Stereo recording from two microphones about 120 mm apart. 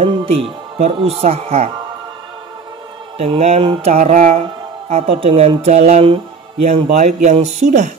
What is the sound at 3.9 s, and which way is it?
Speech, 75° right (ahead or behind).